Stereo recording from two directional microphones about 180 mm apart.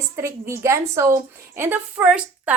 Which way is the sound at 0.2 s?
15° right (ahead or behind).